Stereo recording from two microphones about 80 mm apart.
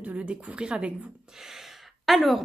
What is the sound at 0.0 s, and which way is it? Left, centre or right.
A woman's voice, centre.